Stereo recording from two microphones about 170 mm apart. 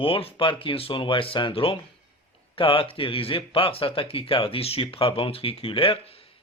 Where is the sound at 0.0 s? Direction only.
35° left (ahead or behind).